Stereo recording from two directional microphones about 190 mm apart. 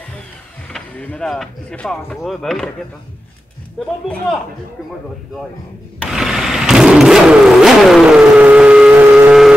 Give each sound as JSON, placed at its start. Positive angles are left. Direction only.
{"t": 0.7, "sound": "speech", "side_deg": 5}
{"t": 3.8, "sound": "speech", "side_deg": 0}
{"t": 5.9, "sound": "vehicle", "side_deg": 0}